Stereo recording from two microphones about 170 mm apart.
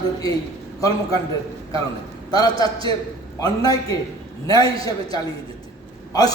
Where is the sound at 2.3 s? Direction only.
20° left (ahead or behind).